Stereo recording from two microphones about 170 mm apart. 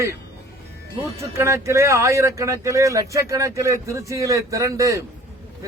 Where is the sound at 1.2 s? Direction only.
15° right (ahead or behind).